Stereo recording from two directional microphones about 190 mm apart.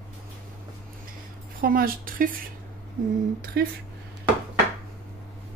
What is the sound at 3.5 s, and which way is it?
Speech, 55° right (ahead or behind).